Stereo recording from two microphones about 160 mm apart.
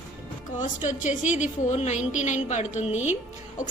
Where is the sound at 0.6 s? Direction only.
50° left (ahead or behind).